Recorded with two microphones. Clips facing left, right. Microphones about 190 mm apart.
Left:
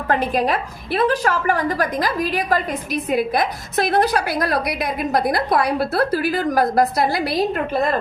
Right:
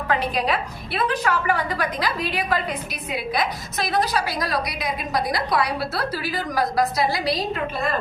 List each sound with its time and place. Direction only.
0.1 s a woman's voice: 45° left (ahead or behind)